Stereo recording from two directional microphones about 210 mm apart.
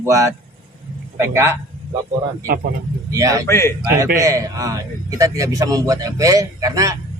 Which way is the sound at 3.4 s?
10° left (ahead or behind).